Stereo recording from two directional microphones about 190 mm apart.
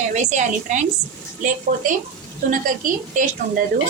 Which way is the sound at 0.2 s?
40° right (ahead or behind).